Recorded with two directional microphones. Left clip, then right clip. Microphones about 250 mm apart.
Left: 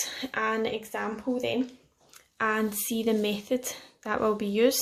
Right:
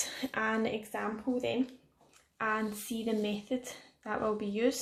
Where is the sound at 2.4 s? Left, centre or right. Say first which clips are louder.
Left 6 dB; left.